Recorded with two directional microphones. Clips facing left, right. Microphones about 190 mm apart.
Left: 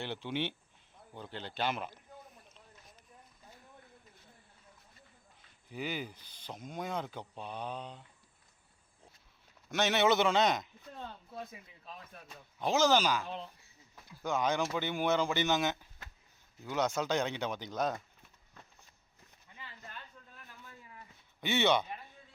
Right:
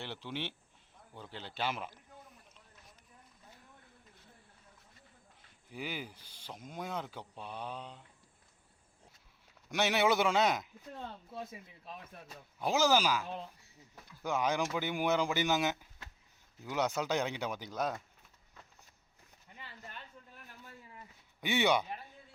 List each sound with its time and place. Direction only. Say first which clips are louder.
0.0 s speech: left 5 dB; centre (ahead or behind)
5.7 s speech: left 3 dB; 10° right (ahead or behind)
9.6 s speech: left 1 dB; 10° right (ahead or behind)
12.3 s speech: left 1 dB; 10° right (ahead or behind)
20.7 s a sound: right 1 dB; 30° right (ahead or behind)
21.4 s speech: left 1 dB; 15° right (ahead or behind)